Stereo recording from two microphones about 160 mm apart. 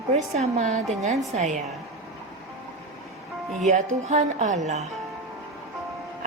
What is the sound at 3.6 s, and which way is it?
A woman's voice, 45° right (ahead or behind).